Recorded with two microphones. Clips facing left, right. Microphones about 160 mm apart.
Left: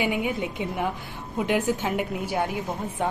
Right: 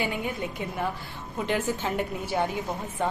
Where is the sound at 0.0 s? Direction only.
15° left (ahead or behind).